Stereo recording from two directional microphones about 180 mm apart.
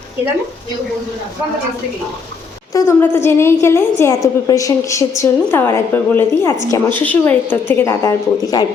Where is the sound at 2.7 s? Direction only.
15° left (ahead or behind).